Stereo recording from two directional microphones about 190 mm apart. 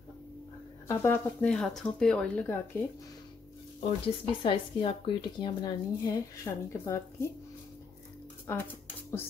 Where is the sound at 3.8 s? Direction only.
30° left (ahead or behind); by 7.3 s 15° left (ahead or behind).